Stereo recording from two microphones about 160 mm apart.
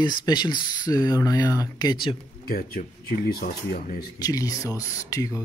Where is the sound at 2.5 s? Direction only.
65° left (ahead or behind).